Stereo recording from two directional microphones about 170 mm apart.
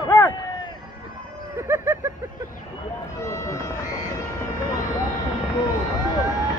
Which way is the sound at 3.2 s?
20° left (ahead or behind).